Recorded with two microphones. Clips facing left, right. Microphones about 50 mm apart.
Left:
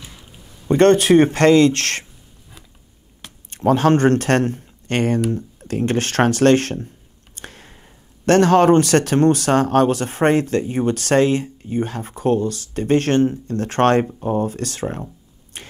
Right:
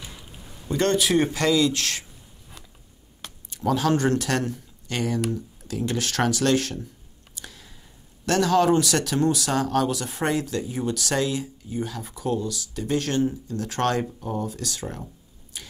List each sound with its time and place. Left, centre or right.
0.7 s speech: left
3.4 s speech: left
7.3 s a sound: left
8.3 s speech: left
15.5 s tick-tock: left